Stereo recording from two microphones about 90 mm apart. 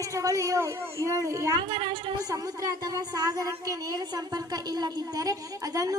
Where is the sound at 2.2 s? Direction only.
45° right (ahead or behind).